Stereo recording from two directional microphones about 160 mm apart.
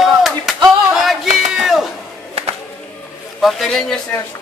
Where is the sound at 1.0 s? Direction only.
Centre (ahead or behind).